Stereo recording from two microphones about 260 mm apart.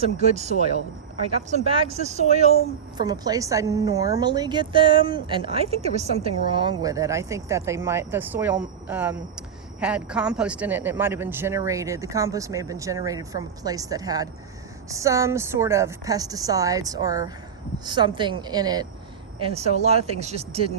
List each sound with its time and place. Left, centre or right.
0.0 s speech: right
3.0 s a woman's voice: centre